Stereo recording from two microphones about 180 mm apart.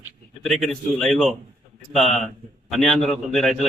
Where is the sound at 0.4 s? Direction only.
Centre (ahead or behind).